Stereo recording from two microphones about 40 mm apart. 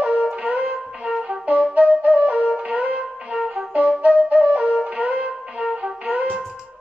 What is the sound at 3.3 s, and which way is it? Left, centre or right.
Flute, centre.